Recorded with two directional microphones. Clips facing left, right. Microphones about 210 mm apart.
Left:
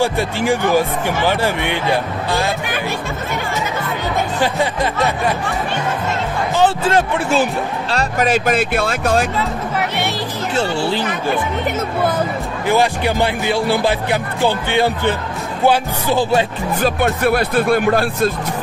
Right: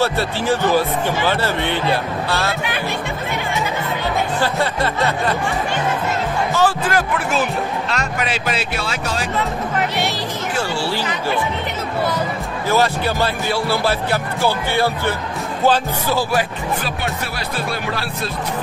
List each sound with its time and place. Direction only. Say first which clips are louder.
0.0 s speech: left 2 dB; 15° left (ahead or behind)
6.5 s a man's voice: left 4 dB; 25° left (ahead or behind); by 9.3 s 50° left (ahead or behind)
10.5 s a man's voice: left 5 dB; 25° left (ahead or behind)
11.0 s speech: left 3 dB; 50° left (ahead or behind)
12.6 s speech: left 2 dB; 15° left (ahead or behind)
16.8 s speech: left 9 dB; 50° left (ahead or behind)